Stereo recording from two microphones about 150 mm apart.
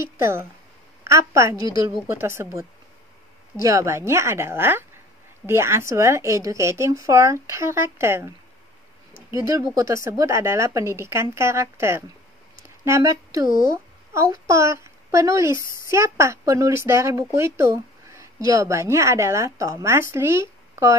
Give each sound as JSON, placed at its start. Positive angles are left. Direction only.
{"t": 0.2, "sound": "a woman's voice", "side_deg": -15}
{"t": 3.6, "sound": "a woman's voice", "side_deg": -20}
{"t": 9.3, "sound": "speech", "side_deg": -20}
{"t": 14.5, "sound": "a child's voice", "side_deg": -20}